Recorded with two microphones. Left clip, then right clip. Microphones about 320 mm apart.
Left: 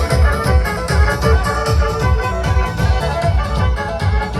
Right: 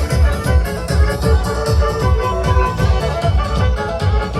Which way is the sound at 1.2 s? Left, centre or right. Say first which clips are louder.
Even; left.